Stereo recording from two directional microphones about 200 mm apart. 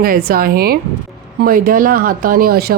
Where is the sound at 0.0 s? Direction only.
50° right (ahead or behind).